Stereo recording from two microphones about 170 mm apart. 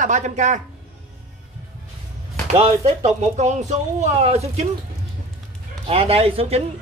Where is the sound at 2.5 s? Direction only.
40° right (ahead or behind).